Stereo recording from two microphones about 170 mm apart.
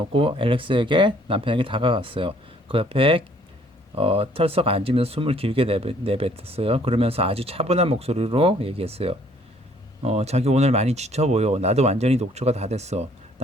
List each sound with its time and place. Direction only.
0.0 s speech: 30° right (ahead or behind)